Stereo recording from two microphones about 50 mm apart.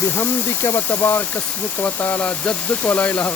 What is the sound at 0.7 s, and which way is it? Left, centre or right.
Speech, left.